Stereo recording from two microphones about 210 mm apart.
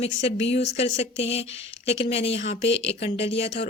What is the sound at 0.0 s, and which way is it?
Speech, 30° left (ahead or behind).